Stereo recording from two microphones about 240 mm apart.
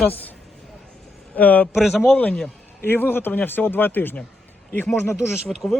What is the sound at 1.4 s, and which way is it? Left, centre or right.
A man's voice, centre.